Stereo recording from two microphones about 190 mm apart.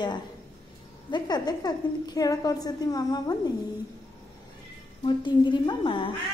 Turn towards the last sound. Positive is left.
turn(degrees=25)  # may be behind; listen again after turning